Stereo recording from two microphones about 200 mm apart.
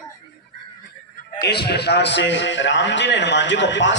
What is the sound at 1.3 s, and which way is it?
A man's voice, 55° left (ahead or behind).